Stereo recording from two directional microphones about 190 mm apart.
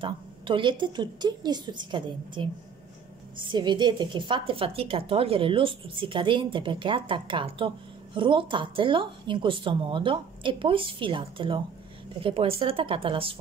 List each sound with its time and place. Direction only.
0.0 s a woman's voice: 25° right (ahead or behind)